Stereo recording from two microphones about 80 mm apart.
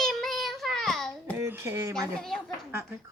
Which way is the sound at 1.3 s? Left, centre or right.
Right.